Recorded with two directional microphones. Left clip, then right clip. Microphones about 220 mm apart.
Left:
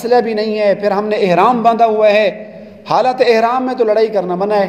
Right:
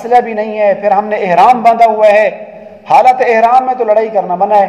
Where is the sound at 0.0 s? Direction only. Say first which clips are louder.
Right 3 dB; 35° left (ahead or behind).